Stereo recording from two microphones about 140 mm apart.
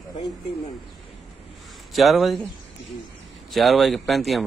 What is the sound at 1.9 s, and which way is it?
Speech, centre (ahead or behind).